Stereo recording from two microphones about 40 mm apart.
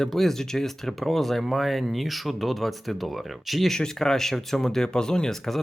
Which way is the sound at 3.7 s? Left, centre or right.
Centre.